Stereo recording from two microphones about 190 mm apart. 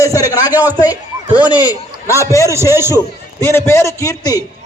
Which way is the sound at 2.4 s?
15° right (ahead or behind).